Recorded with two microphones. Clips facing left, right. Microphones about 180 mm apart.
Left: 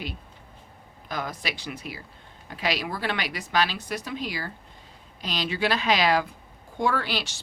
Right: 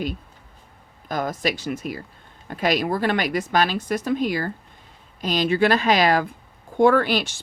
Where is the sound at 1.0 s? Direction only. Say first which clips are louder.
Right 8 dB; 45° right (ahead or behind).